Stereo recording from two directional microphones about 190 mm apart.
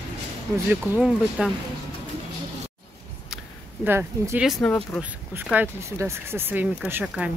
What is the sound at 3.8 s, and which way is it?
Speech, 10° right (ahead or behind).